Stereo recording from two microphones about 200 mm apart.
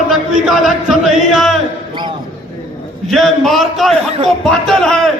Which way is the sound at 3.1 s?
Centre (ahead or behind).